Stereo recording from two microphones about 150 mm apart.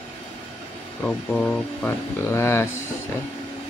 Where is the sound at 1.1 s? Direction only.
5° left (ahead or behind).